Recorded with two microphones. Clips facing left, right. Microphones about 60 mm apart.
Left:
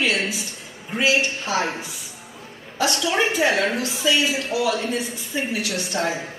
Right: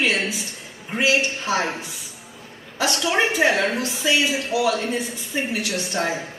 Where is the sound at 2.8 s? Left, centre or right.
Right.